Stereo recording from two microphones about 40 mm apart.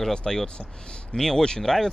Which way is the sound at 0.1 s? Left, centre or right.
Centre.